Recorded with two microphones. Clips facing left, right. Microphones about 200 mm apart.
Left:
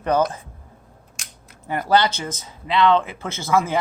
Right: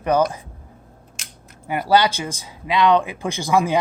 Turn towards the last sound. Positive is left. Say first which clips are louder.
# right 2 dB
turn(degrees=-15)  # may be behind; listen again after turning